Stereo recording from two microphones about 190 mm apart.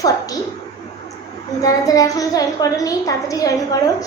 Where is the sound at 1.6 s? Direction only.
20° left (ahead or behind).